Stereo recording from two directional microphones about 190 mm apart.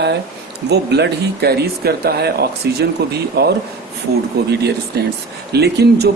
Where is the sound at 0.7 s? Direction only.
60° right (ahead or behind).